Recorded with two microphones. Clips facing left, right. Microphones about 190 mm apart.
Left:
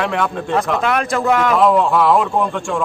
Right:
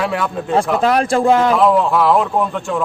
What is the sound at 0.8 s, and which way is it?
Speech, 35° right (ahead or behind).